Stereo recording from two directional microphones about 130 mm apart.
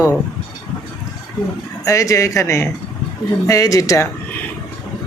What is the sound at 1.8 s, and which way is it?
Speech, 25° left (ahead or behind).